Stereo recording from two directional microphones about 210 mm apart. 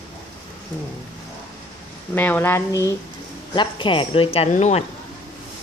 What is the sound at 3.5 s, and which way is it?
Speech, 20° left (ahead or behind).